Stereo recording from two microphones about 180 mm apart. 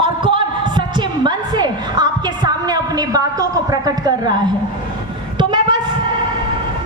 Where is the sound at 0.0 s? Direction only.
25° right (ahead or behind).